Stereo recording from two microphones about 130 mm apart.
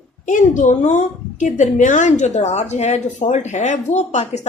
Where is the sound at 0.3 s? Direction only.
85° left.